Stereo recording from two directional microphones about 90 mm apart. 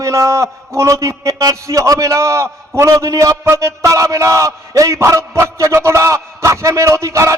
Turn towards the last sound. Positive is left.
turn(degrees=-35)  # may be behind; listen again after turning